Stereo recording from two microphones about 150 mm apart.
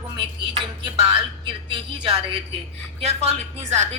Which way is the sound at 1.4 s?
35° right (ahead or behind).